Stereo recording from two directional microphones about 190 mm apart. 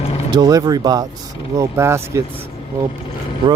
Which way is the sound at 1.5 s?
15° right (ahead or behind).